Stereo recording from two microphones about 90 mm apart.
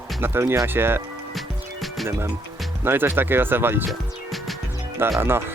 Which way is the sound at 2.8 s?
25° right (ahead or behind).